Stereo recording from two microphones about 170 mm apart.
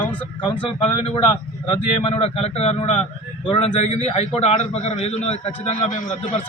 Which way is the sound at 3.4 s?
30° left (ahead or behind).